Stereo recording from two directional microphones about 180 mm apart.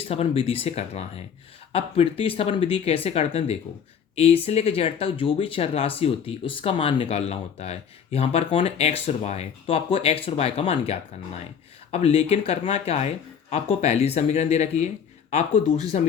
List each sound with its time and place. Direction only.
0.1 s speech: 35° left (ahead or behind)